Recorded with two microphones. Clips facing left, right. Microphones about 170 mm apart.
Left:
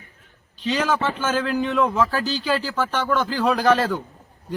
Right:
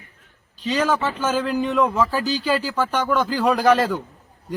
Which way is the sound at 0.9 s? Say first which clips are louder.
Right 1 dB; 10° right (ahead or behind).